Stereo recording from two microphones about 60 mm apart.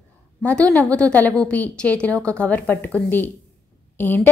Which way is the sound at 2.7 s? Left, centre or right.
Left.